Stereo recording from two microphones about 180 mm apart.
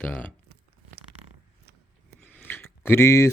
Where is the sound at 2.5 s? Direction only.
15° left (ahead or behind).